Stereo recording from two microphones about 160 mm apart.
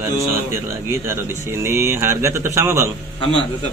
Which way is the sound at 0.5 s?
15° right (ahead or behind).